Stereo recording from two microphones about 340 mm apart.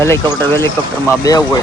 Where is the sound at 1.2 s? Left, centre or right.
Centre.